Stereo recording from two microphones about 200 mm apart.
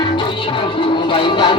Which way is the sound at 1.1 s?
25° left (ahead or behind).